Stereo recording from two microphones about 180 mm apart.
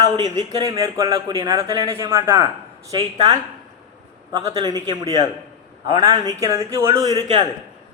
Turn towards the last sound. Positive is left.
turn(degrees=-25)  # may be behind; listen again after turning